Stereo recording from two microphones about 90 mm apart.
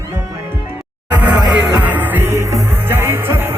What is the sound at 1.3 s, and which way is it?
Music, 10° right (ahead or behind).